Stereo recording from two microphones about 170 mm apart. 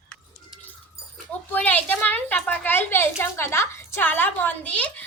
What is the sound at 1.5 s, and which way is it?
A woman's voice, 10° left (ahead or behind).